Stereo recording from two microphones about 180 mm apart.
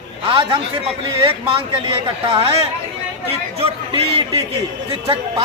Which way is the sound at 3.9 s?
30° right (ahead or behind).